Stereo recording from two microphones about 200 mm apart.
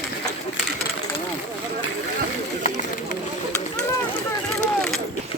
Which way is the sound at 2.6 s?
35° left (ahead or behind).